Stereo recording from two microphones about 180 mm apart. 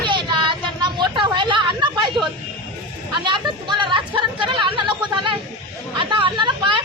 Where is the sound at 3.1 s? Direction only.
25° right (ahead or behind).